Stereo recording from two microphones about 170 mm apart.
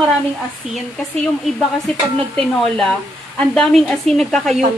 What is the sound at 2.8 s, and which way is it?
Speech, 5° left (ahead or behind).